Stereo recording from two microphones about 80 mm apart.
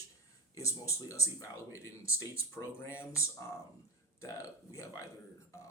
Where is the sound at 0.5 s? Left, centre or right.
Left.